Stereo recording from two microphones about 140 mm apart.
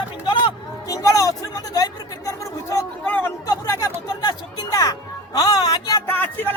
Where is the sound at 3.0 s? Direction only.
10° left (ahead or behind).